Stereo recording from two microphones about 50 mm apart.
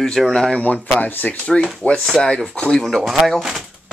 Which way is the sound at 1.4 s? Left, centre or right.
Left.